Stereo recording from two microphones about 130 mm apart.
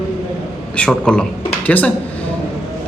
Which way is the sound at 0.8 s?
5° left (ahead or behind).